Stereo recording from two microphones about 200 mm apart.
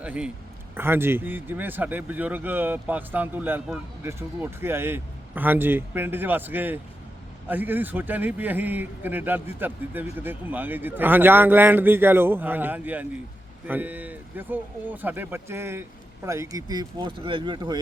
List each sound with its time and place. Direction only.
0.0 s a man's voice: 5° right (ahead or behind); by 17.7 s 25° right (ahead or behind)